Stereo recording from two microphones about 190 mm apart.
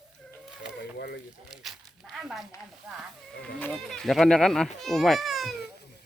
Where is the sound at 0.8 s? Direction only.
60° left (ahead or behind).